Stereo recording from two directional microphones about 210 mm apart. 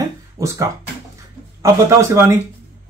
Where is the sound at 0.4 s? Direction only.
15° right (ahead or behind).